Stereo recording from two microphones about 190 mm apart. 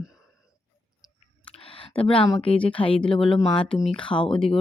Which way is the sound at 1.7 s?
30° left (ahead or behind).